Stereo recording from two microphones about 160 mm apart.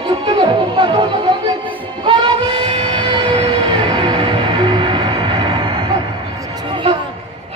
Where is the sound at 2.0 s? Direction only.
35° right (ahead or behind).